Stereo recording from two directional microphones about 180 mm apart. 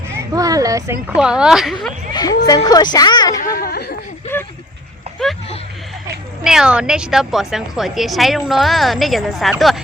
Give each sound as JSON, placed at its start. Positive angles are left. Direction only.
{"t": 0.1, "sound": "speech", "side_deg": -20}
{"t": 1.2, "sound": "a woman's voice", "side_deg": -5}
{"t": 2.1, "sound": "music", "side_deg": 25}
{"t": 2.6, "sound": "a woman's voice", "side_deg": 20}
{"t": 3.7, "sound": "a sound", "side_deg": 65}
{"t": 4.3, "sound": "a sound", "side_deg": 10}
{"t": 6.4, "sound": "a woman's voice", "side_deg": -5}